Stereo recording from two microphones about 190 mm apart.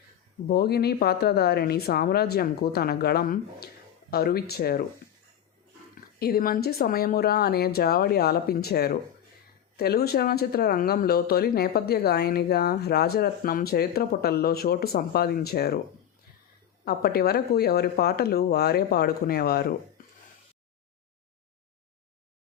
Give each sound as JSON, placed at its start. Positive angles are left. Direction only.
{"t": 0.4, "sound": "speech", "side_deg": 55}
{"t": 6.1, "sound": "speech", "side_deg": 55}
{"t": 16.8, "sound": "speech", "side_deg": 55}